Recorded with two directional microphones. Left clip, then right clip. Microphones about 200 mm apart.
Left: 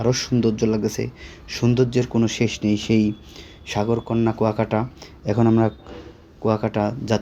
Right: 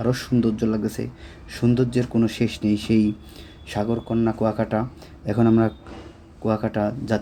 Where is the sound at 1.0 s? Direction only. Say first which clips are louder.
Left 4 dB; 45° left (ahead or behind).